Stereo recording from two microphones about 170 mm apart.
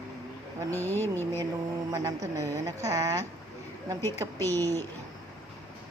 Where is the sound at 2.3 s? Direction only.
20° right (ahead or behind).